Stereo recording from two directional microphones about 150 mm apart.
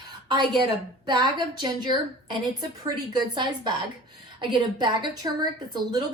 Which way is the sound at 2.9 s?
30° right (ahead or behind).